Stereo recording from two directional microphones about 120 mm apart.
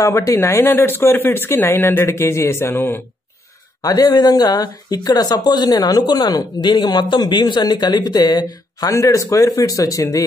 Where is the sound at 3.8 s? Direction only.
30° left (ahead or behind).